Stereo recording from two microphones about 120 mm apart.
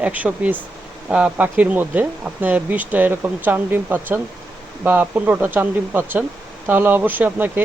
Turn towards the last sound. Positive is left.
turn(degrees=-15)  # may be behind; listen again after turning